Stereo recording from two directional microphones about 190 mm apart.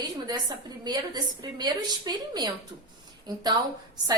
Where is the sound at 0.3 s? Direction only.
20° right (ahead or behind).